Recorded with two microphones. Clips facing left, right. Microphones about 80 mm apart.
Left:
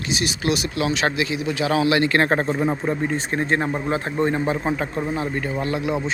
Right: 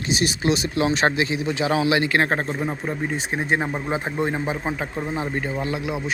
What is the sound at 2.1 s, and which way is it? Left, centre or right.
Speech, centre.